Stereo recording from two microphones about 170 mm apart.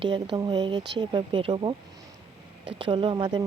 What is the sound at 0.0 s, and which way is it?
Speech, 30° right (ahead or behind).